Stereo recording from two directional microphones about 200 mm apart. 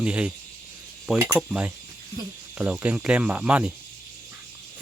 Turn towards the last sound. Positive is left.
turn(degrees=-5)  # may be behind; listen again after turning